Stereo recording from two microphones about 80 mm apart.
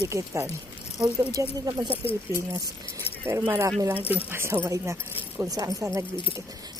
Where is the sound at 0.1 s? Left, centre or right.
Right.